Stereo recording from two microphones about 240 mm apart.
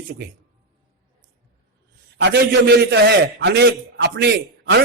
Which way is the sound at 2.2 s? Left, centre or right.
Right.